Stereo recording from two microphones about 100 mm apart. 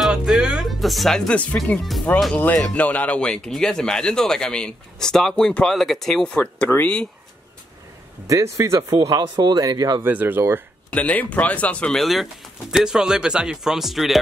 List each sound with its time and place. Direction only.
0.0 s speech: 5° right (ahead or behind); by 7.1 s 15° left (ahead or behind)
8.3 s speech: 30° right (ahead or behind)
10.0 s speech: 20° right (ahead or behind)
10.9 s speech: 15° left (ahead or behind); by 14.2 s centre (ahead or behind)